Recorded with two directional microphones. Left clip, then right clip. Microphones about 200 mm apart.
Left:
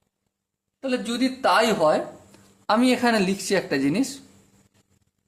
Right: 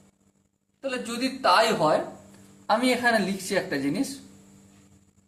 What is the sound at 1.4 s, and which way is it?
Speech, 55° left (ahead or behind).